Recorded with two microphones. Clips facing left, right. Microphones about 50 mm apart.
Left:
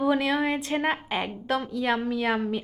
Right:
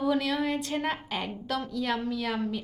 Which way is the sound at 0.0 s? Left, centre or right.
Left.